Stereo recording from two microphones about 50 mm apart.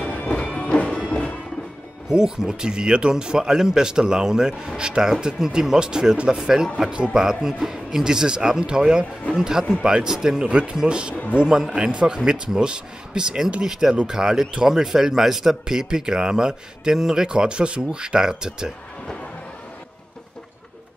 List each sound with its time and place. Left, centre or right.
0.0 s music: left
2.0 s speech: centre